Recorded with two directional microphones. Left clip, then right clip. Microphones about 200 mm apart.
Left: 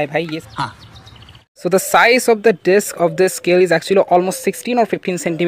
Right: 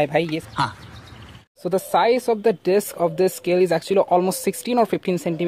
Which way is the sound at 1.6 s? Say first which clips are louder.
Left 6 dB; 25° left (ahead or behind).